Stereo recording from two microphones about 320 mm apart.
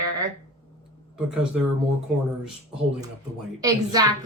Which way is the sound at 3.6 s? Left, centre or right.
Centre.